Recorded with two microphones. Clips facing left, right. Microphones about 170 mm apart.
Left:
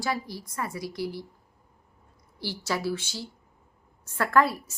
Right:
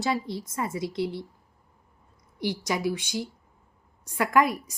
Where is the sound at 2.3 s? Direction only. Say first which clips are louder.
Right 3 dB; 15° right (ahead or behind).